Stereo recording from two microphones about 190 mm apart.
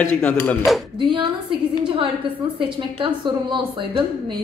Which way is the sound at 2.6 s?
25° right (ahead or behind).